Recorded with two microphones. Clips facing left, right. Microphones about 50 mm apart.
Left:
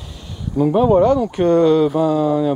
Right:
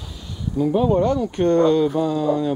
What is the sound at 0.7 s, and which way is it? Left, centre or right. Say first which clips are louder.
Speech: left 4 dB; left.